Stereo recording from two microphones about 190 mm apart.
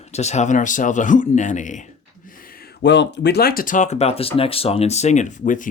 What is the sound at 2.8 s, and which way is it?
Speech, 65° left (ahead or behind).